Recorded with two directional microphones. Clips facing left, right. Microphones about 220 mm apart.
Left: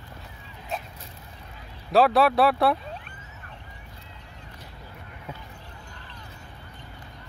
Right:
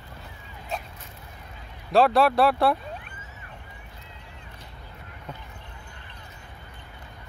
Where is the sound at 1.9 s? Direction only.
Centre (ahead or behind).